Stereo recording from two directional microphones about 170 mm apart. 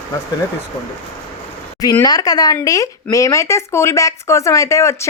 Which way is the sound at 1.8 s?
20° left (ahead or behind).